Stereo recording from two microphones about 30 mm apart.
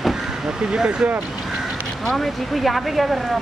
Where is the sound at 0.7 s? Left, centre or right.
Right.